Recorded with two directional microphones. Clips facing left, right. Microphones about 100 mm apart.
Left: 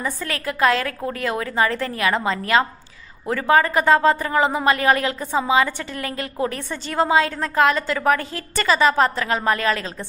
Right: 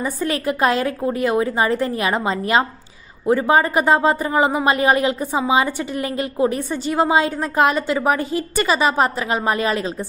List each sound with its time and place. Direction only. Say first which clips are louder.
0.0 s a woman's voice: right 5 dB; 20° right (ahead or behind)